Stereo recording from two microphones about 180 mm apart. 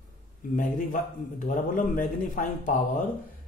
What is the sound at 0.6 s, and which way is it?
A man's voice, 45° left (ahead or behind).